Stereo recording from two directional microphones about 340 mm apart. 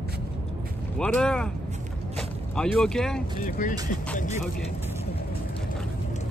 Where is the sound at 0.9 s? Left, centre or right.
Centre.